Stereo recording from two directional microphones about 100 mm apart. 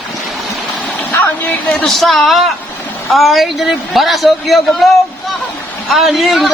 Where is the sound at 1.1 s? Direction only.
20° left (ahead or behind).